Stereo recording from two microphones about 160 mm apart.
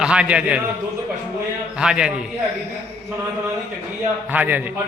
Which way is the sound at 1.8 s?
5° right (ahead or behind).